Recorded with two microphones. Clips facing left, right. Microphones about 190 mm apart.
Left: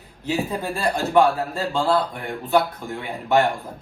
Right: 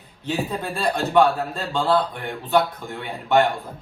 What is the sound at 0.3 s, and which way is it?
Speech, centre (ahead or behind).